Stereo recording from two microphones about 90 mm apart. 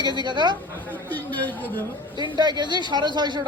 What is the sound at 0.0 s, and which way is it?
Speech, 55° right (ahead or behind).